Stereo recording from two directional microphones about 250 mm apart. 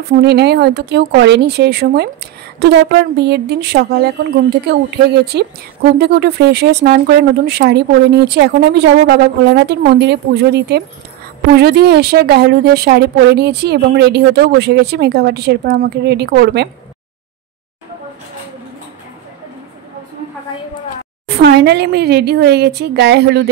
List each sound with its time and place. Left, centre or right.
0.1 s a woman's voice: right
21.3 s speech: right